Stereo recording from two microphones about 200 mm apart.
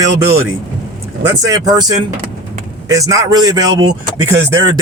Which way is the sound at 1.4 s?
20° right (ahead or behind).